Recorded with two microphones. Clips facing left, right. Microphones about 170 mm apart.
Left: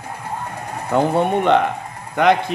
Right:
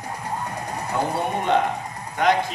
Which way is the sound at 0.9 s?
65° left (ahead or behind).